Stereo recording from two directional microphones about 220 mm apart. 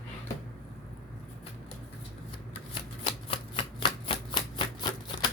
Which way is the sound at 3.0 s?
25° left (ahead or behind).